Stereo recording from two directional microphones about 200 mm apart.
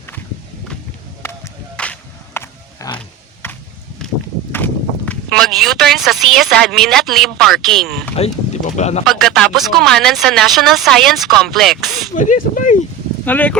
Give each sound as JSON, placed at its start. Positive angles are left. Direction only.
{"t": 1.2, "sound": "a sound", "side_deg": 10}
{"t": 4.5, "sound": "speech", "side_deg": 10}
{"t": 8.1, "sound": "speech", "side_deg": 35}
{"t": 9.0, "sound": "speech", "side_deg": 0}
{"t": 12.1, "sound": "speech", "side_deg": 40}
{"t": 13.2, "sound": "speech", "side_deg": 10}